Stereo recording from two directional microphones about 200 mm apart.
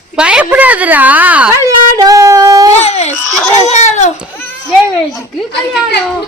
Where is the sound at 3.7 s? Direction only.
35° left (ahead or behind).